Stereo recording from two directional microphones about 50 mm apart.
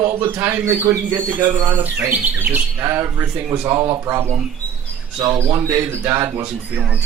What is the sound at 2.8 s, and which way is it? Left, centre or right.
Speech, right.